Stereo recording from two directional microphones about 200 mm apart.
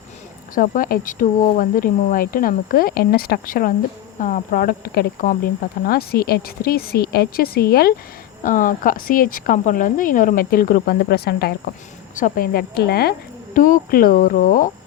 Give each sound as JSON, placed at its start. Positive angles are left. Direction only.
{"t": 0.5, "sound": "speech", "side_deg": 45}